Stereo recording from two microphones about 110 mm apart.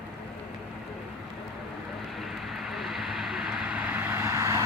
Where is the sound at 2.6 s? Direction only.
Centre (ahead or behind); by 4.7 s 25° right (ahead or behind).